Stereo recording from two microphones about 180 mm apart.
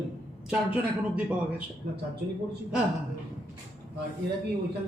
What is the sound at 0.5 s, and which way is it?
Speech, 10° right (ahead or behind).